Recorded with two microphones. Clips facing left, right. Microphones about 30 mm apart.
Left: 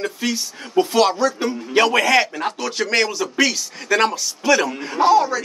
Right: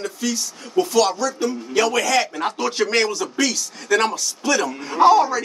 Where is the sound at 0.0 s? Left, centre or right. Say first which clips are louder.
Left 2 dB; left.